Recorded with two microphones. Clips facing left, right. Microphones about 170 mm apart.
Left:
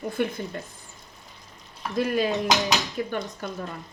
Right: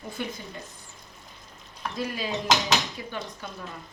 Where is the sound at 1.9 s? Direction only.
55° left (ahead or behind).